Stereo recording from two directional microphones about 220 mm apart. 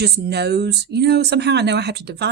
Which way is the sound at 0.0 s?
50° right (ahead or behind).